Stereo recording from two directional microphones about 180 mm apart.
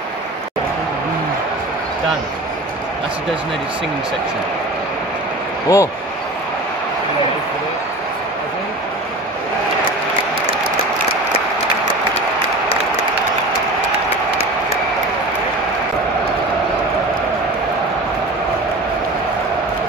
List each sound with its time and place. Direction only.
5.7 s a man's voice: 15° left (ahead or behind)